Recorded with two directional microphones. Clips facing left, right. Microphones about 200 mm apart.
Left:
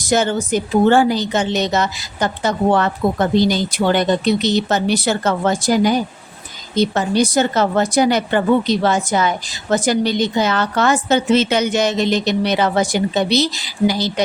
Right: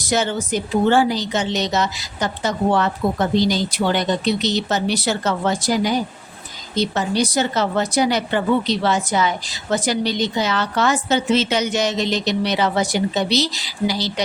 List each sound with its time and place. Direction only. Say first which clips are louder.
0.1 s a woman's voice: left 4 dB; 50° left (ahead or behind)